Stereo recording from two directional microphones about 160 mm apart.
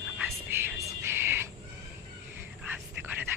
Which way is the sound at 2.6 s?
10° right (ahead or behind).